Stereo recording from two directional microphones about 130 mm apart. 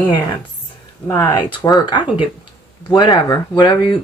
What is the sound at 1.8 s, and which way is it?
Speech, 40° left (ahead or behind).